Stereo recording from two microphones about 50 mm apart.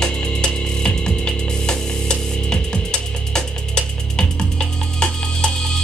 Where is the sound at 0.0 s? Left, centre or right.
Centre.